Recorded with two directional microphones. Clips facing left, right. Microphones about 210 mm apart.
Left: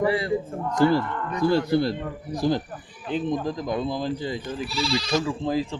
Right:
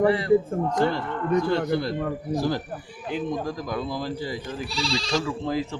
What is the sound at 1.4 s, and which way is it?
Speech, 35° left (ahead or behind).